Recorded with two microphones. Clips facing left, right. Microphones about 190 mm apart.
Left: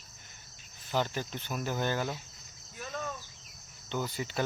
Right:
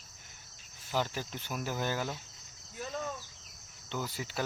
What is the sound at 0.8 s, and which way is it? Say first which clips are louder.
Speech: left 2 dB; 5° right (ahead or behind).